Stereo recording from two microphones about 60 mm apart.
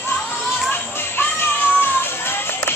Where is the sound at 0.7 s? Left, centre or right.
Left.